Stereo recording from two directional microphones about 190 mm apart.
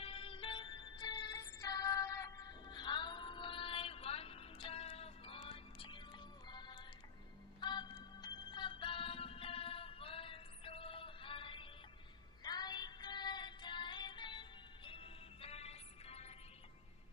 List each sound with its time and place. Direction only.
0.0 s music: 30° left (ahead or behind)